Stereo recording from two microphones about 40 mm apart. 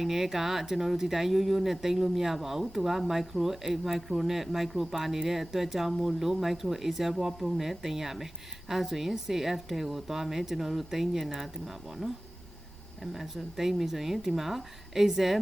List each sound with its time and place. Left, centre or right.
0.0 s speech: centre